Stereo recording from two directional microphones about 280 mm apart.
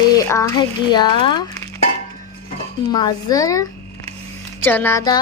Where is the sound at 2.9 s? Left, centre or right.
Centre.